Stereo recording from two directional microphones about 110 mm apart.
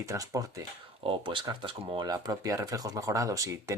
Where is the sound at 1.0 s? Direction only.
50° right (ahead or behind).